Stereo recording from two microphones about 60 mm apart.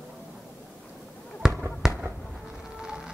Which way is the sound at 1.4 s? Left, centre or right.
Centre.